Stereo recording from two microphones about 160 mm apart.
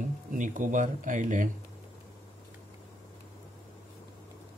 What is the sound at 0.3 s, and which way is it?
Speech, 55° right (ahead or behind).